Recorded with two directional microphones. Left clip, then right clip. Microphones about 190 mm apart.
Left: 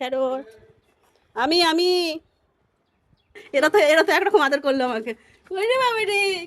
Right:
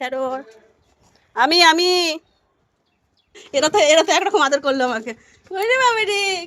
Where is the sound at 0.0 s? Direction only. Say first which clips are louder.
Even; 20° left (ahead or behind).